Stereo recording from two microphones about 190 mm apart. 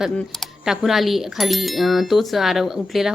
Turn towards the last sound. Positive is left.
turn(degrees=0)  # may be behind; listen again after turning